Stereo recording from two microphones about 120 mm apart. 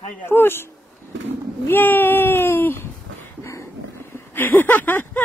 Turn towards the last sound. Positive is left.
turn(degrees=15)  # may be behind; listen again after turning